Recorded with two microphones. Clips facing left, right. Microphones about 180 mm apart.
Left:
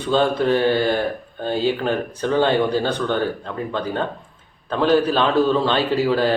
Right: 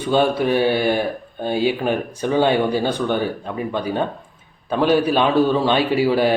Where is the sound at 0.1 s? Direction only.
15° right (ahead or behind).